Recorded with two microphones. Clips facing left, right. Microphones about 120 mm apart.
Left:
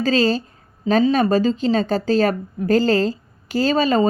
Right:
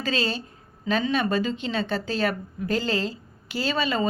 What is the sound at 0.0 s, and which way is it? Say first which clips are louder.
Speech: left 9 dB; 40° left (ahead or behind).